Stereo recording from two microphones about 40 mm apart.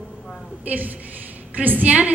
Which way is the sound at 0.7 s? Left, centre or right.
Right.